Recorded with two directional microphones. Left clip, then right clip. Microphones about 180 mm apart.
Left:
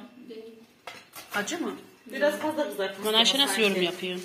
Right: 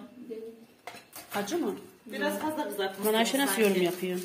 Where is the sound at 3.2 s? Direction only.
40° right (ahead or behind).